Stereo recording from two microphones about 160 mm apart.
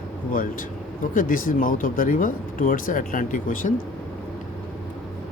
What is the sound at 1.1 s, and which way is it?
Speech, 60° left (ahead or behind).